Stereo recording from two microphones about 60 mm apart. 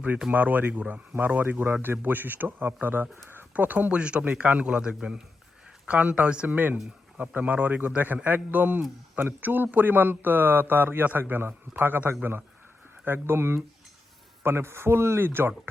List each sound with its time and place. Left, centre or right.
0.3 s a man's voice: right
5.9 s a man's voice: right